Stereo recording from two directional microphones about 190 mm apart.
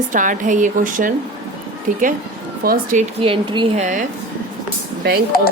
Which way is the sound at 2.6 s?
50° right (ahead or behind).